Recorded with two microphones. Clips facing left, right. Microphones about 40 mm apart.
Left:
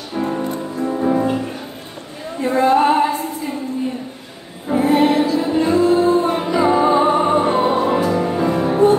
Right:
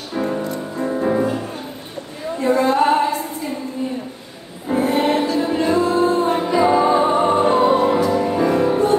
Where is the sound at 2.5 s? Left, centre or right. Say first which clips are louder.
Left 3 dB; left.